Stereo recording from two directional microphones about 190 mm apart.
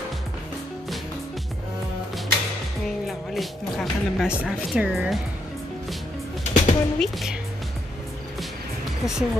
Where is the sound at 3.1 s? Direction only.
Centre (ahead or behind).